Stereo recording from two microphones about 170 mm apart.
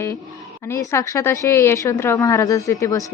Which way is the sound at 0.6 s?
15° left (ahead or behind).